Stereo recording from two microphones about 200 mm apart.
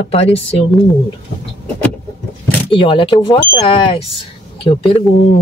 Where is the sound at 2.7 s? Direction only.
25° left (ahead or behind).